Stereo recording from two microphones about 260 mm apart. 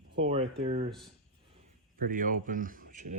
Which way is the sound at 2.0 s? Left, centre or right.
Right.